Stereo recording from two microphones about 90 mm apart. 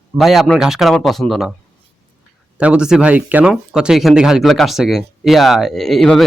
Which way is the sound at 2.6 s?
15° right (ahead or behind).